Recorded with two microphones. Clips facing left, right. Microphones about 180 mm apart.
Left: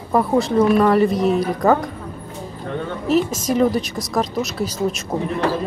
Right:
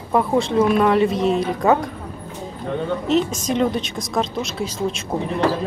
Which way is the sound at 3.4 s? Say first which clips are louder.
Left 3 dB; 5° left (ahead or behind).